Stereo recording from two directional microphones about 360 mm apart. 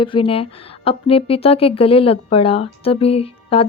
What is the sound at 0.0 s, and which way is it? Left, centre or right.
A woman's voice, centre.